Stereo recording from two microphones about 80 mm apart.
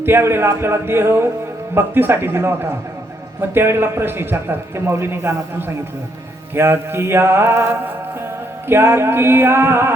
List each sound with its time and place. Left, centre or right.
0.0 s a man's voice: right